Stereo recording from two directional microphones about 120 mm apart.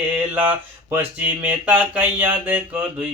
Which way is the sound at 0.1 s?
15° right (ahead or behind).